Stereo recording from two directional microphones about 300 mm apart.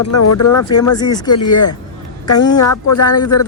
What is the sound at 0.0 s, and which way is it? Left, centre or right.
Speech, left.